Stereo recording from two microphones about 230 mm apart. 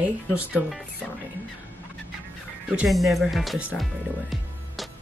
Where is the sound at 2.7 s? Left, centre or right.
Centre.